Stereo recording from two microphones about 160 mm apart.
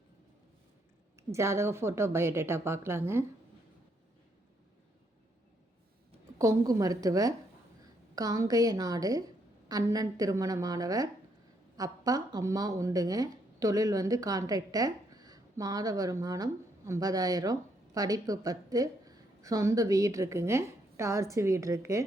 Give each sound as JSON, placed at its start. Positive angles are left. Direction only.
{"t": 1.3, "sound": "a woman's voice", "side_deg": -15}
{"t": 6.4, "sound": "a woman's voice", "side_deg": -20}